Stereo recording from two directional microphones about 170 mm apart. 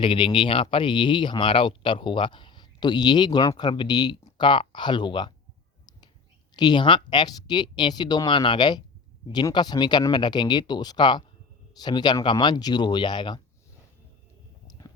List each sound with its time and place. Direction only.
0.0 s speech: 30° left (ahead or behind)
6.6 s speech: 25° left (ahead or behind)
14.7 s a sound: 20° left (ahead or behind)